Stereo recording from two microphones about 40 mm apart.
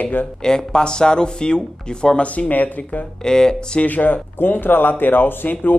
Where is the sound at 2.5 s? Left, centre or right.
Left.